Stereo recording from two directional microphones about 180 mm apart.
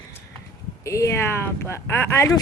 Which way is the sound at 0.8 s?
15° left (ahead or behind).